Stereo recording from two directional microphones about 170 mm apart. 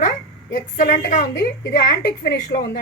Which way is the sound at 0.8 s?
55° left (ahead or behind).